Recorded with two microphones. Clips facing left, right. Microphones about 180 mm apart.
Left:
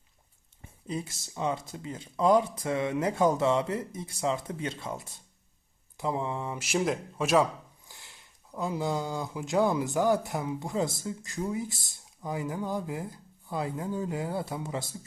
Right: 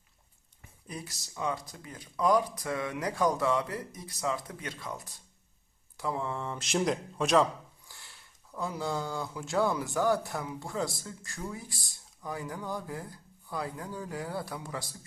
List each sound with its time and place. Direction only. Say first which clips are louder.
0.6 s speech: left 7 dB; 25° left (ahead or behind); by 7.4 s 5° left (ahead or behind)
7.9 s speech: left 1 dB; 20° left (ahead or behind)